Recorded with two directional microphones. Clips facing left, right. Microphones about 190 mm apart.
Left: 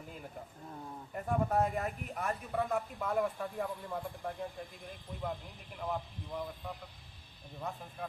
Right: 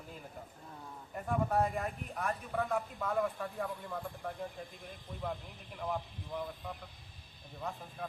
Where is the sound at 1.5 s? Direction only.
Centre (ahead or behind).